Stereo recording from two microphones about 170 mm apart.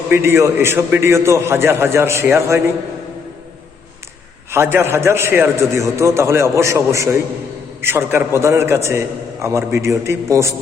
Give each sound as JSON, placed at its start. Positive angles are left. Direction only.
{"t": 0.1, "sound": "a man's voice", "side_deg": -15}
{"t": 4.5, "sound": "a man's voice", "side_deg": -15}